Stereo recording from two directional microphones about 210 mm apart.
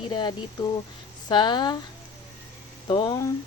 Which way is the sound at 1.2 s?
20° left (ahead or behind).